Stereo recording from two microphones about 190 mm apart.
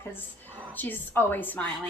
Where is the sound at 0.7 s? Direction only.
10° left (ahead or behind).